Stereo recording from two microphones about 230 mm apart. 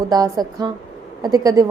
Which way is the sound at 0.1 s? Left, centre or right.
Centre.